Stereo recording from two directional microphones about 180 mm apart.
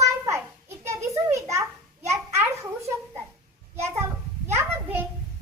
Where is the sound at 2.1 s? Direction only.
15° right (ahead or behind).